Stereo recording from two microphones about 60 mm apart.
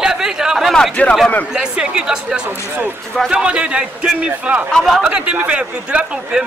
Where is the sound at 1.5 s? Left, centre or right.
Centre.